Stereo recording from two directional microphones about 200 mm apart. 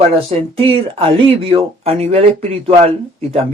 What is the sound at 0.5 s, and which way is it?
Speech, 25° right (ahead or behind).